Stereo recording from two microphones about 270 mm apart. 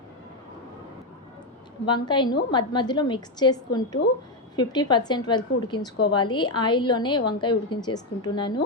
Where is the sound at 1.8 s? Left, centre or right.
Centre.